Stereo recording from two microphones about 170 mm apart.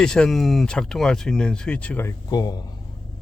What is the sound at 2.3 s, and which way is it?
Speech, 20° left (ahead or behind).